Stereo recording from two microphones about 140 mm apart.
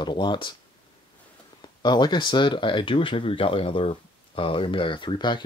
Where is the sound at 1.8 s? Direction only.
30° left (ahead or behind).